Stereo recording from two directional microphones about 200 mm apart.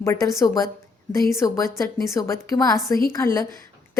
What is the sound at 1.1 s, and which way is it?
A woman's voice, 15° left (ahead or behind).